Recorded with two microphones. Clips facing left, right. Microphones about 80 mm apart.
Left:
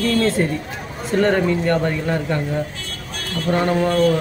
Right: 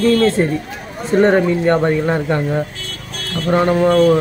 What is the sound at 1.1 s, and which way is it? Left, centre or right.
Speech, right.